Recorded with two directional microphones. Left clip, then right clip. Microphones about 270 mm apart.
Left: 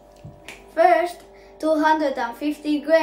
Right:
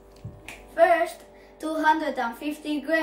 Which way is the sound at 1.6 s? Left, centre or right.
Left.